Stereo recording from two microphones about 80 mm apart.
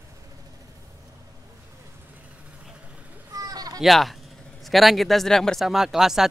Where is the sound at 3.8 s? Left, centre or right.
Centre.